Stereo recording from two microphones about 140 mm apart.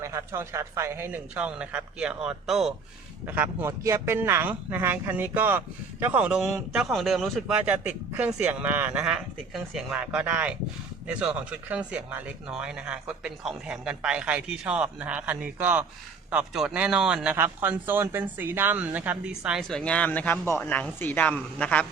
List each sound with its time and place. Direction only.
0.0 s speech: 20° right (ahead or behind); by 2.7 s 5° right (ahead or behind)
3.2 s speech: 15° right (ahead or behind)
8.1 s speech: 20° right (ahead or behind)
19.5 s speech: centre (ahead or behind)